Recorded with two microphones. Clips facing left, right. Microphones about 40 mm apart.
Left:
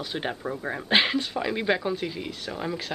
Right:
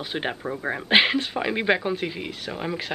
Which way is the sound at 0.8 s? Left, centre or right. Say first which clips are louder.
Right 3 dB; centre.